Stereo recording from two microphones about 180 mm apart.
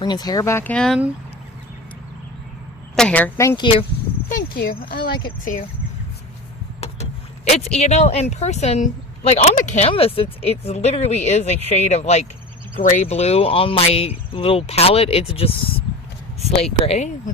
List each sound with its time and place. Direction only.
0.0 s speech: 20° left (ahead or behind); by 0.9 s 5° left (ahead or behind)
2.9 s speech: 5° left (ahead or behind)
4.3 s speech: 55° left (ahead or behind)
6.8 s speech: 40° left (ahead or behind)
16.8 s speech: 35° left (ahead or behind)